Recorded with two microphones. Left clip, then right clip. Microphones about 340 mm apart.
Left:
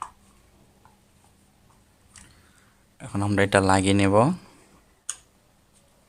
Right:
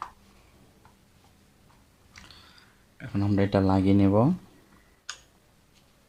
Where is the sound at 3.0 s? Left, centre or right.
Centre.